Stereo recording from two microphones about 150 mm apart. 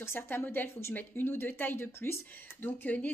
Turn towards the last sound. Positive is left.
turn(degrees=10)  # may be behind; listen again after turning